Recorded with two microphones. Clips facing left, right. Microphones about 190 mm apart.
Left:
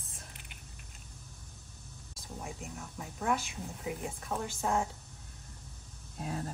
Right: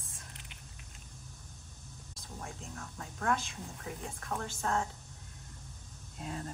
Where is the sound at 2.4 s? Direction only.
15° left (ahead or behind).